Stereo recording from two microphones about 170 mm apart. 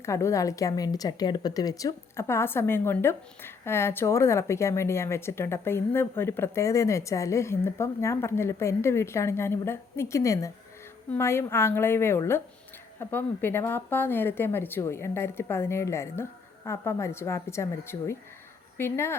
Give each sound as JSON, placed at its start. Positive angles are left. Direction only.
{"t": 0.0, "sound": "a woman's voice", "side_deg": 15}